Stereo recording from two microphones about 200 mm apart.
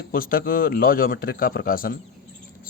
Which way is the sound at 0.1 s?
45° left (ahead or behind).